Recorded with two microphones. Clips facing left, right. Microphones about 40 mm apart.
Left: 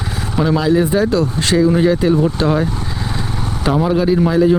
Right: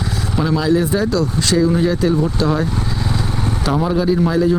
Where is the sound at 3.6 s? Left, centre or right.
Centre.